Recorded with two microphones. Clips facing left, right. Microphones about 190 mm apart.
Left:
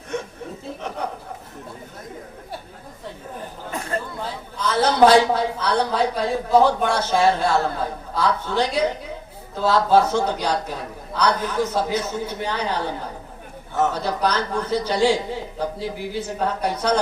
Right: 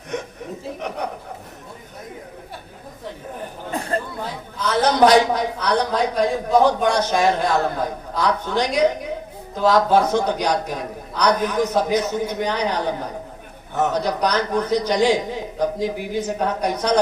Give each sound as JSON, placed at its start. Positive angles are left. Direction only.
{"t": 4.8, "sound": "a man's voice", "side_deg": -15}
{"t": 13.9, "sound": "a man's voice", "side_deg": -15}